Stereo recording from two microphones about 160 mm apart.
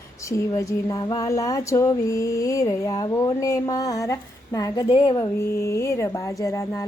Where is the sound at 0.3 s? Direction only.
20° left (ahead or behind).